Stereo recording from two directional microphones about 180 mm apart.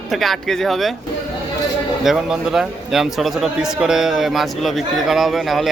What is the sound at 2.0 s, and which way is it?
A man's voice, centre (ahead or behind).